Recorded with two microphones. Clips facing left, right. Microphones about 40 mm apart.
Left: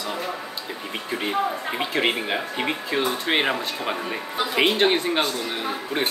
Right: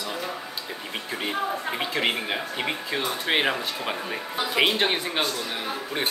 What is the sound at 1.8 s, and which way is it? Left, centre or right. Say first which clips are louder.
Speech: left 4 dB; centre.